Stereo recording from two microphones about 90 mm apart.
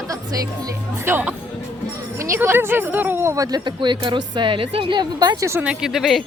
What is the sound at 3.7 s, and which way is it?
Speech, 60° right (ahead or behind).